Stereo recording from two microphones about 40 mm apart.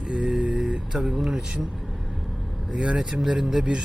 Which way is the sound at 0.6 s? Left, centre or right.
Centre.